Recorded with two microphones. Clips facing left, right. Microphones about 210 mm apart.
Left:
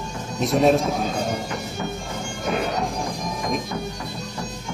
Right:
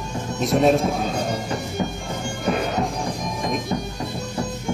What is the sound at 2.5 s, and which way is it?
Music, centre (ahead or behind).